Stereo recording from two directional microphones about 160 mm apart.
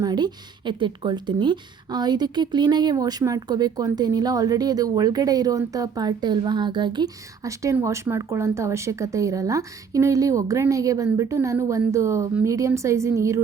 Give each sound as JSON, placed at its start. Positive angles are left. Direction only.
{"t": 0.0, "sound": "a woman's voice", "side_deg": -25}